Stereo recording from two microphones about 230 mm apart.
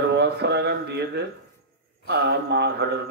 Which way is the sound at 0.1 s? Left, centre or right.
Right.